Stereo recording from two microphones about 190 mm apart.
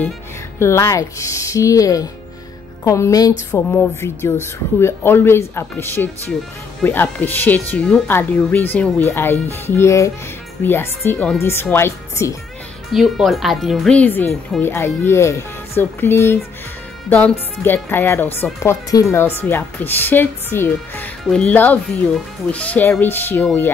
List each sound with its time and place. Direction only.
0.6 s speech: 15° left (ahead or behind)
12.9 s speech: centre (ahead or behind)